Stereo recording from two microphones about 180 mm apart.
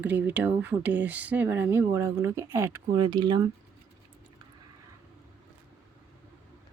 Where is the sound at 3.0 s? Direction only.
25° right (ahead or behind).